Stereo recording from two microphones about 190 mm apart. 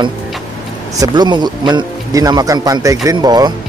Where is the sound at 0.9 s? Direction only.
20° right (ahead or behind).